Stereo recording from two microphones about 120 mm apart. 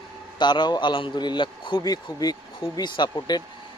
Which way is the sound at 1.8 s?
35° left (ahead or behind).